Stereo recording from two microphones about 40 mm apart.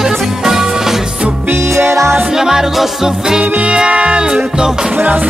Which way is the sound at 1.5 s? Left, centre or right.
Right.